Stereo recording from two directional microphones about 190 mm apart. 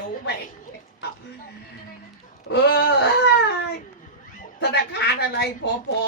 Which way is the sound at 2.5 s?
60° left (ahead or behind).